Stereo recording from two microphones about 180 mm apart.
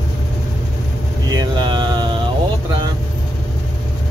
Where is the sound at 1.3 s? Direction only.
25° right (ahead or behind).